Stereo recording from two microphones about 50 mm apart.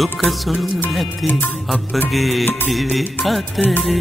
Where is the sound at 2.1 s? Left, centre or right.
Centre.